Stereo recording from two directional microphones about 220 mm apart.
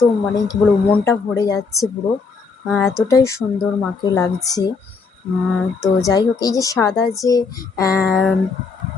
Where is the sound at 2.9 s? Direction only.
15° left (ahead or behind).